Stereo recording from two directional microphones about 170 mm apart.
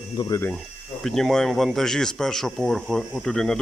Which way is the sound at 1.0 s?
Centre (ahead or behind).